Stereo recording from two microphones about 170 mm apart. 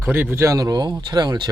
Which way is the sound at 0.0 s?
10° right (ahead or behind).